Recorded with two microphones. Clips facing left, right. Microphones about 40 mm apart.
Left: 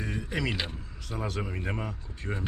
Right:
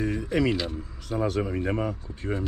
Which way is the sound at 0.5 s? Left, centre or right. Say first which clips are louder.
Right 5 dB; left.